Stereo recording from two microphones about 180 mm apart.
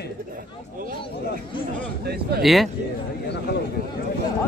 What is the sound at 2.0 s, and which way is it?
Speech, 60° right (ahead or behind).